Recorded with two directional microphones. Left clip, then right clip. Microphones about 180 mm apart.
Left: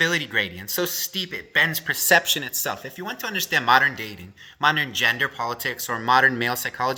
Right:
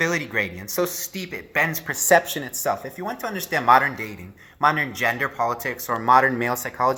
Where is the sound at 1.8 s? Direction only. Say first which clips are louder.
Right 1 dB; 30° left (ahead or behind).